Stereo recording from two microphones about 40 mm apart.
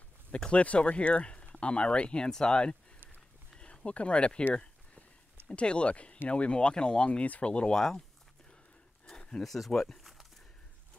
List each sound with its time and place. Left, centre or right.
0.5 s speech: left
5.5 s speech: left
7.1 s speech: left
7.7 s speech: centre
9.4 s speech: centre